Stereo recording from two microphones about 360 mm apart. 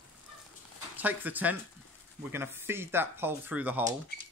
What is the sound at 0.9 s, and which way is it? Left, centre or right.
Speech, centre.